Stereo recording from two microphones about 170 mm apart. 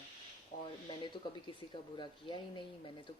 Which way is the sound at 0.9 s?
30° left (ahead or behind).